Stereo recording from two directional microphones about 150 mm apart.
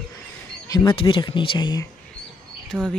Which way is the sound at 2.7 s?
Centre (ahead or behind).